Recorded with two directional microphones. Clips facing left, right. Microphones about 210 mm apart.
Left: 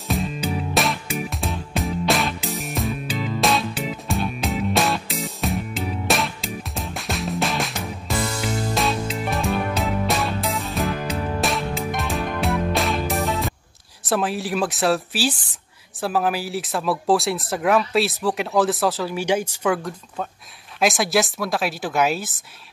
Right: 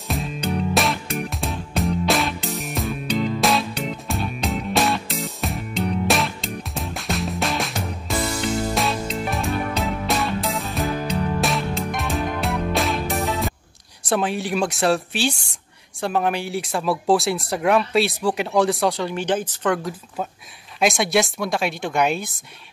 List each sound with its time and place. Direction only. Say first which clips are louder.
0.1 s music: left 1 dB; centre (ahead or behind)
14.0 s speech: right 1 dB; centre (ahead or behind)